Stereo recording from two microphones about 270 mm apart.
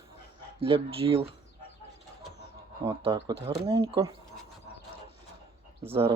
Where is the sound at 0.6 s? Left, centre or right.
Centre.